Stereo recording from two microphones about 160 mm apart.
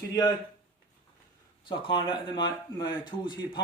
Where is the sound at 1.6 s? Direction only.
30° left (ahead or behind).